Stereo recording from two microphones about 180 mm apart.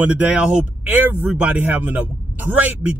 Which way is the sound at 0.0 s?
10° right (ahead or behind).